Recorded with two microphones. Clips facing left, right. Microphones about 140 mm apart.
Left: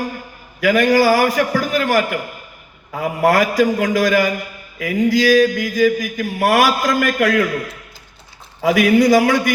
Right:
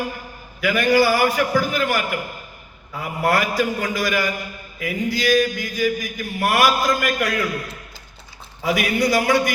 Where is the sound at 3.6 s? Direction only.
90° left.